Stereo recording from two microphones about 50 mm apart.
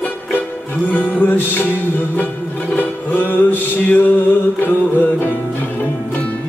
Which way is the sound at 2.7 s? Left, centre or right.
Left.